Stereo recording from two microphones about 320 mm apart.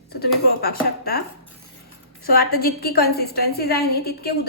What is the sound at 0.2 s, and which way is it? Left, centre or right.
A woman's voice, left.